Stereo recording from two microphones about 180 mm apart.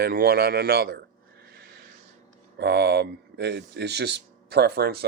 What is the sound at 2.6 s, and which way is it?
Speech, 65° right (ahead or behind).